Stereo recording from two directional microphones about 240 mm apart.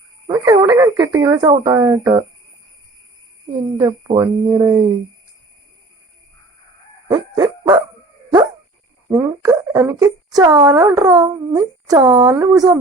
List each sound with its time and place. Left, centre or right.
0.3 s speech: centre
3.8 s speech: centre
7.1 s dog: centre
9.0 s speech: centre